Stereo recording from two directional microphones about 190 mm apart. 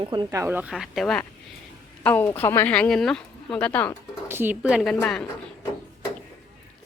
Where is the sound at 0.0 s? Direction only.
25° right (ahead or behind).